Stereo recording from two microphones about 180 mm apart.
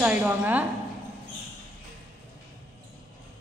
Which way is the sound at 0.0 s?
10° right (ahead or behind).